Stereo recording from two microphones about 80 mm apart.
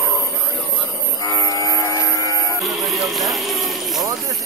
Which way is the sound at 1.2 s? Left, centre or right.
Left.